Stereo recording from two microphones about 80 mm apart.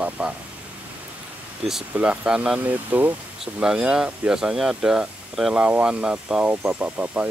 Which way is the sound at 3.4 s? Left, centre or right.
Centre.